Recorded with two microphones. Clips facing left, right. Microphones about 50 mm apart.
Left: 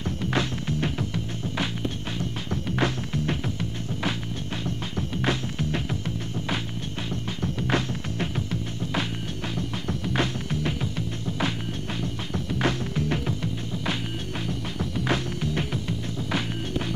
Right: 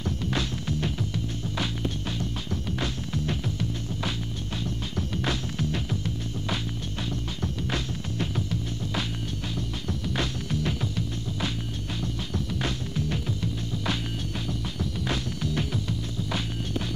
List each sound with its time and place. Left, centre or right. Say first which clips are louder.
0.0 s music: left 3 dB; left
4.9 s music: left 3 dB; left
7.6 s music: left 7 dB; left
8.4 s music: left 1 dB; left
12.6 s music: left 4 dB; left
14.8 s music: left 5 dB; left